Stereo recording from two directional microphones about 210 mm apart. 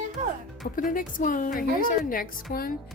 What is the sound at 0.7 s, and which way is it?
A woman's voice, 40° left (ahead or behind).